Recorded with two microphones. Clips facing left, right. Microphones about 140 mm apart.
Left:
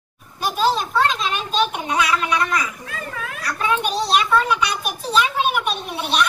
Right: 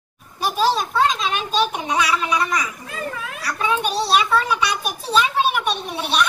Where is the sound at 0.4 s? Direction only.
Centre (ahead or behind).